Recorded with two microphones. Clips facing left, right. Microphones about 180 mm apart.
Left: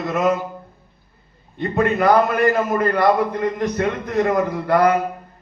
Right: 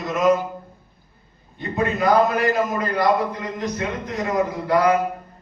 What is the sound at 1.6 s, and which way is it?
A man's voice, 60° left (ahead or behind).